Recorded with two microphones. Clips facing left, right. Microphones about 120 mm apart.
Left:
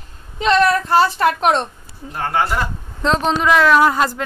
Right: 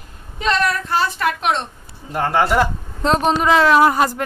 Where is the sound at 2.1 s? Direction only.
90° right.